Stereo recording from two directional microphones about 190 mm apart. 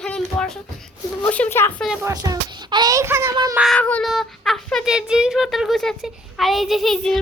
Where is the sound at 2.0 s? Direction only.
20° right (ahead or behind).